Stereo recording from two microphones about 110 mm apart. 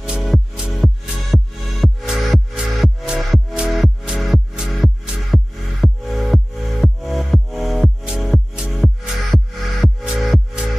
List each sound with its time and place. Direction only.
0.0 s music: 5° right (ahead or behind)